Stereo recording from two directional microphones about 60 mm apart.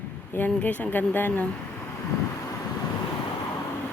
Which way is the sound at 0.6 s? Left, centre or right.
Left.